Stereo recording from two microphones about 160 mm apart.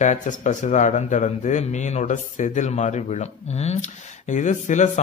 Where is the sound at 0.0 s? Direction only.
50° left (ahead or behind).